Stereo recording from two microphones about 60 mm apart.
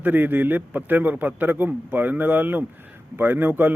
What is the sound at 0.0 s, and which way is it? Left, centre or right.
A man's voice, right.